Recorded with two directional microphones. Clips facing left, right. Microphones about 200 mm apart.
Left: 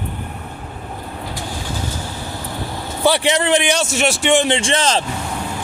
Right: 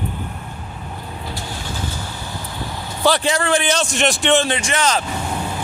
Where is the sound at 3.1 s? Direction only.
20° left (ahead or behind).